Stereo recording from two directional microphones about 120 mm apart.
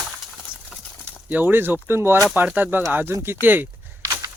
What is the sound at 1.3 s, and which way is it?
Speech, 15° right (ahead or behind).